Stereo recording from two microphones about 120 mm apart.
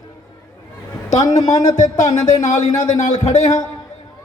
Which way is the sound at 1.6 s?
85° left.